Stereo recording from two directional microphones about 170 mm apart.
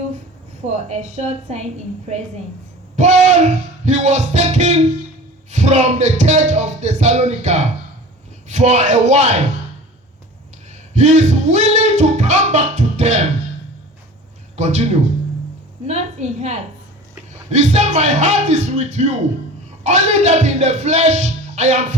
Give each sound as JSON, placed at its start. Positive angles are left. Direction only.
{"t": 0.7, "sound": "a woman's voice", "side_deg": -40}
{"t": 2.9, "sound": "music", "side_deg": -45}
{"t": 10.9, "sound": "a sound", "side_deg": -40}
{"t": 14.5, "sound": "a man's voice", "side_deg": -40}
{"t": 17.5, "sound": "music", "side_deg": -45}